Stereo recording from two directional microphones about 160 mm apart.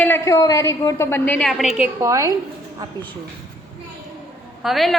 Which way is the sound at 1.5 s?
Centre (ahead or behind).